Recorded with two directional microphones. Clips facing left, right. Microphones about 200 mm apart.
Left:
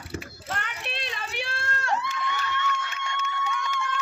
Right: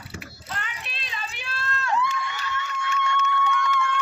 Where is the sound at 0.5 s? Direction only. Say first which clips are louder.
Left 3 dB; 60° left (ahead or behind).